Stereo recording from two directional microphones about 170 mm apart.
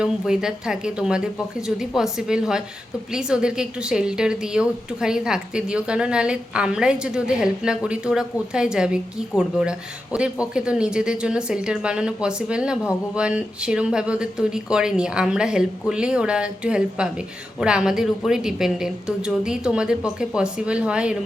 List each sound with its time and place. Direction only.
0.0 s a woman's voice: 5° right (ahead or behind)